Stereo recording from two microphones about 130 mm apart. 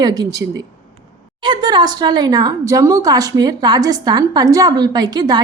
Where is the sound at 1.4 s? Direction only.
35° right (ahead or behind).